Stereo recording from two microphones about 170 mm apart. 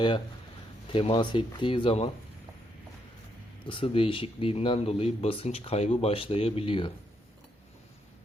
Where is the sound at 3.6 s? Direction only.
30° left (ahead or behind).